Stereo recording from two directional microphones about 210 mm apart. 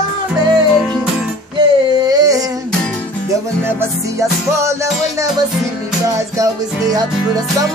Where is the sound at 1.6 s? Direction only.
20° right (ahead or behind).